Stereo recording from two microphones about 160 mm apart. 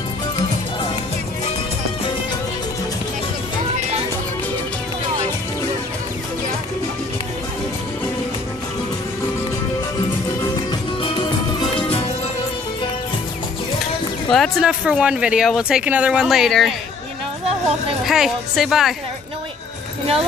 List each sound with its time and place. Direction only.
11.0 s music: 30° left (ahead or behind)
14.3 s speech: centre (ahead or behind)
18.0 s speech: centre (ahead or behind)